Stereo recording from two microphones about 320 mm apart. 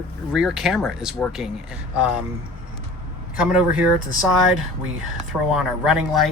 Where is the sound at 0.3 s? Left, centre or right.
Centre.